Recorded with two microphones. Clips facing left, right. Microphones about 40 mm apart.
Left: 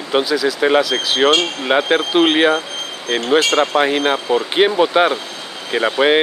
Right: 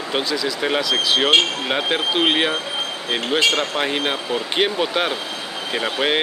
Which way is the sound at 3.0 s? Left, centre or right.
Centre.